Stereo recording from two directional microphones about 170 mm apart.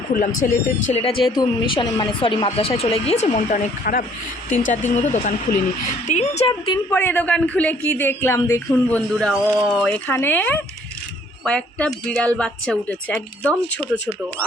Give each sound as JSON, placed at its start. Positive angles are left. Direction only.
{"t": 0.1, "sound": "speech", "side_deg": 50}
{"t": 1.4, "sound": "speech", "side_deg": 25}
{"t": 4.7, "sound": "speech", "side_deg": 45}
{"t": 6.9, "sound": "speech", "side_deg": 10}
{"t": 9.1, "sound": "a woman's voice", "side_deg": 0}
{"t": 9.8, "sound": "a woman's voice", "side_deg": 10}